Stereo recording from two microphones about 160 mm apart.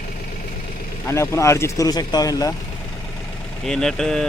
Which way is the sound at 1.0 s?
15° left (ahead or behind).